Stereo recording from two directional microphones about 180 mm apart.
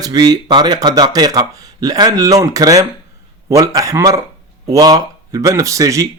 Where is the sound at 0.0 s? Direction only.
20° right (ahead or behind).